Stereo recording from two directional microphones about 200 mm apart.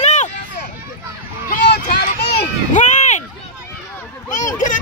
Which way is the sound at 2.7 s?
35° left (ahead or behind).